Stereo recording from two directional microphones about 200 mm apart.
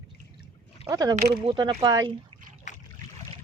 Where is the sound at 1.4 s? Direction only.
25° right (ahead or behind).